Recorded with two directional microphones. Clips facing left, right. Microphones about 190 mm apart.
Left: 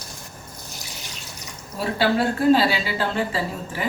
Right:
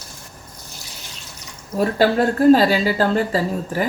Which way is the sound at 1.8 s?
45° right (ahead or behind).